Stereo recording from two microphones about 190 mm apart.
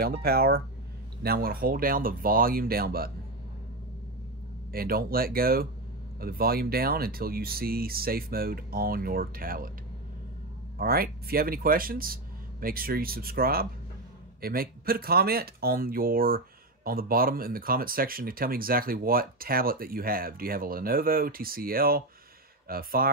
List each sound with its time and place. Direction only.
0.0 s speech: 55° right (ahead or behind)
4.7 s speech: 50° right (ahead or behind)
10.8 s speech: 50° right (ahead or behind)